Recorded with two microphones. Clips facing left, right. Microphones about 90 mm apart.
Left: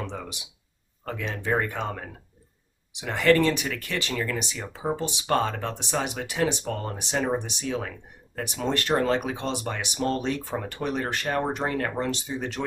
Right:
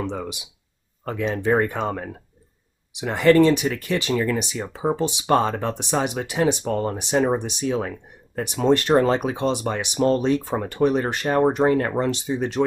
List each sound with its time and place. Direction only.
1.0 s speech: 20° right (ahead or behind)